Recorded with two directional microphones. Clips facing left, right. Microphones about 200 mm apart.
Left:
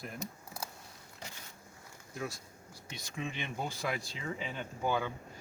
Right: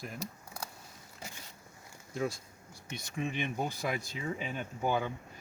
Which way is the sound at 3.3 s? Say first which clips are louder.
Right 4 dB; 45° right (ahead or behind).